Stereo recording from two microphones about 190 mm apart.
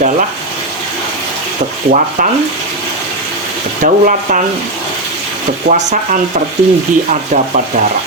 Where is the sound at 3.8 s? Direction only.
40° right (ahead or behind).